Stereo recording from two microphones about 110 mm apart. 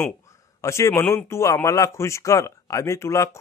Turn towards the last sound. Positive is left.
turn(degrees=25)  # may be behind; listen again after turning